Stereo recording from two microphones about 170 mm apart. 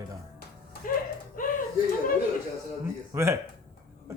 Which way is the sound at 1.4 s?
55° left (ahead or behind).